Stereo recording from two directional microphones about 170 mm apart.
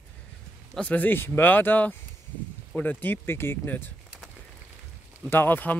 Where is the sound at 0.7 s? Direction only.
5° left (ahead or behind).